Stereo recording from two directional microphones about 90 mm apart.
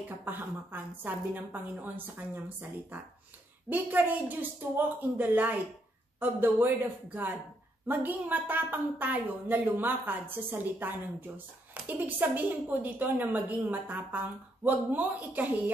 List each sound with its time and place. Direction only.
0.2 s a woman's voice: 20° right (ahead or behind)
3.6 s a woman's voice: 20° right (ahead or behind)